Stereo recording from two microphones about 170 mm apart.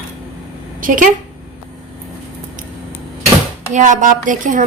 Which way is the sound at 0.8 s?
50° right (ahead or behind).